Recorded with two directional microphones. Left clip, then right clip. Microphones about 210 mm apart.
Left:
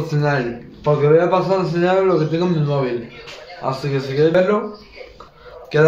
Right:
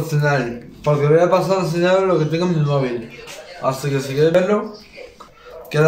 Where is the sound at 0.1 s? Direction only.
Centre (ahead or behind).